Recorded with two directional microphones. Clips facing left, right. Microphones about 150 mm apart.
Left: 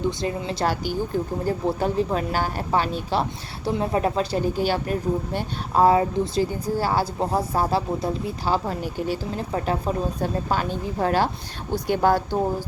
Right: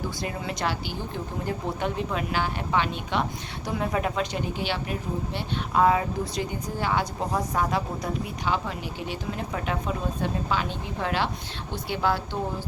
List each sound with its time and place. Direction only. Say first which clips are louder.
0.2 s a woman's voice: left 5 dB; 30° left (ahead or behind)
5.8 s a woman's voice: left 5 dB; 30° left (ahead or behind)